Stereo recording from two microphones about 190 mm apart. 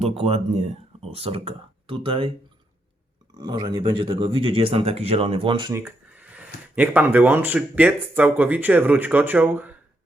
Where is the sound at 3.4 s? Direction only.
25° right (ahead or behind).